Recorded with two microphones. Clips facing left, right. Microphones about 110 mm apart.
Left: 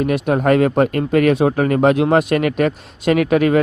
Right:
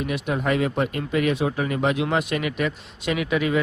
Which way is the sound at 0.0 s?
50° left (ahead or behind).